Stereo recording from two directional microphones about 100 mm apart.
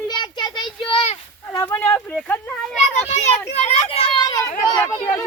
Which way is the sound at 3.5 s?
90° left.